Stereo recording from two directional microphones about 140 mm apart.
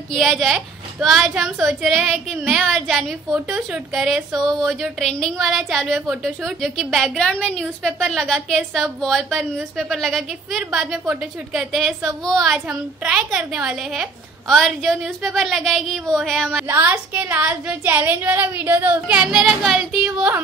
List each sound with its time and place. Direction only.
0.1 s a woman's voice: centre (ahead or behind)
16.6 s a woman's voice: 15° right (ahead or behind)